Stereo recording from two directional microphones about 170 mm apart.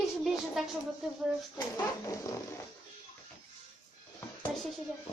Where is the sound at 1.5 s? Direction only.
20° left (ahead or behind).